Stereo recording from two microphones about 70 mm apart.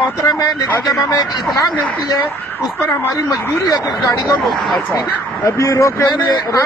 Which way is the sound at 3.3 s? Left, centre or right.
Left.